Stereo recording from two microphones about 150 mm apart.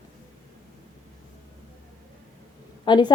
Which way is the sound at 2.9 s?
30° left (ahead or behind).